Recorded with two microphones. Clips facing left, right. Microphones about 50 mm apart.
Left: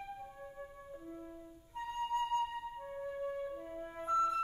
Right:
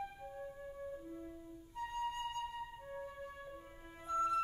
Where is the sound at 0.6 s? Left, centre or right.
Centre.